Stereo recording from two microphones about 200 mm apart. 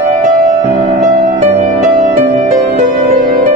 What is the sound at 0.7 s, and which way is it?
Music, 40° right (ahead or behind).